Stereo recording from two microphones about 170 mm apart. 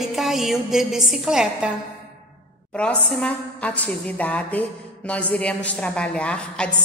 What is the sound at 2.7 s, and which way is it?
A woman's voice, 5° left (ahead or behind).